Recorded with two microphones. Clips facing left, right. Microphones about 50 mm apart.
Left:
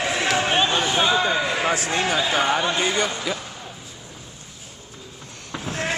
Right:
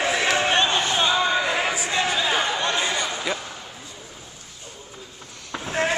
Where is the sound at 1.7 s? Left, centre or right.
Left.